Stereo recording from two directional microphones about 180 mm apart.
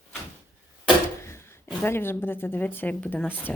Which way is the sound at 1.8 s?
10° left (ahead or behind).